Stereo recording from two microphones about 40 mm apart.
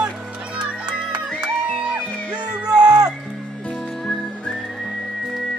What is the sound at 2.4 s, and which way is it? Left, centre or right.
Music, right.